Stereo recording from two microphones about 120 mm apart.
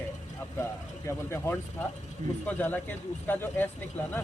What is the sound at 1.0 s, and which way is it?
Speech, 20° left (ahead or behind).